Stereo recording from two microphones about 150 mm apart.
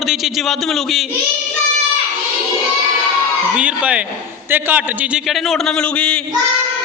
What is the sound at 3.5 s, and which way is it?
A man's voice, 10° right (ahead or behind).